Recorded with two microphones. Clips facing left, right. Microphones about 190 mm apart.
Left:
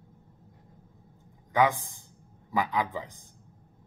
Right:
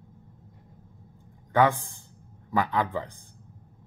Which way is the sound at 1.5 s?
15° left (ahead or behind).